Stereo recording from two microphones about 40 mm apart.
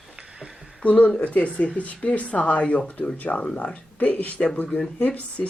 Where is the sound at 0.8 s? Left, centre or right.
Left.